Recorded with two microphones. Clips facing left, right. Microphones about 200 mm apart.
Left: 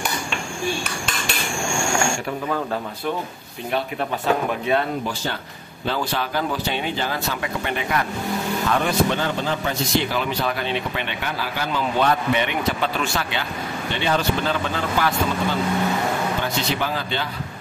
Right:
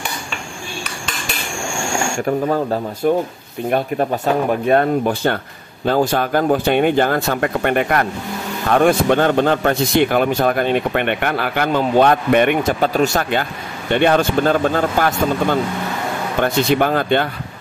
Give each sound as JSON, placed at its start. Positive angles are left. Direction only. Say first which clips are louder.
{"t": 3.0, "sound": "a man's voice", "louder": "right 13 dB", "side_deg": -45}